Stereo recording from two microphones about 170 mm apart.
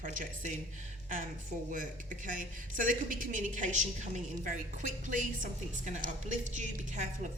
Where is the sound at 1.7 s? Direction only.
50° right (ahead or behind).